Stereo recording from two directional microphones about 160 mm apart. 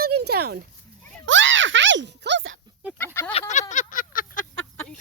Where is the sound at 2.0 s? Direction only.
90° right.